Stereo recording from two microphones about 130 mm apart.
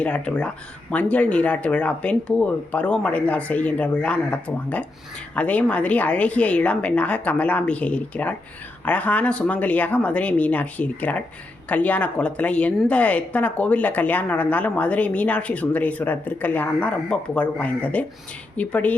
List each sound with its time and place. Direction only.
0.0 s speech: 10° left (ahead or behind)